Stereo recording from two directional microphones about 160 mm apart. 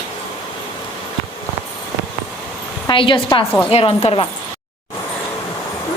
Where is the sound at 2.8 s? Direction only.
30° left (ahead or behind).